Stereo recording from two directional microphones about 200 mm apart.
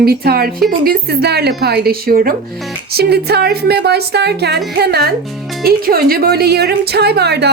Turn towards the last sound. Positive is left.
turn(degrees=-55)  # may be behind; listen again after turning